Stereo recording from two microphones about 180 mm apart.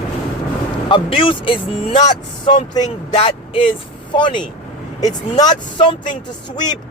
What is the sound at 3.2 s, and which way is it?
Speech, 30° left (ahead or behind).